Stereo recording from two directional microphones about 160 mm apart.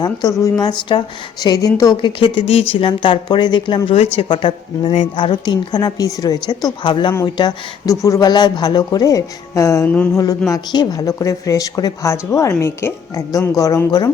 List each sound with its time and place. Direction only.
0.0 s a woman's voice: 25° left (ahead or behind)